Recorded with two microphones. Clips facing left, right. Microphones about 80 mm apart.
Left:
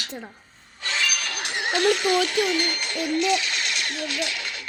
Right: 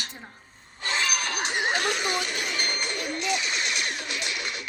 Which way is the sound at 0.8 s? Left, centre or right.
Right.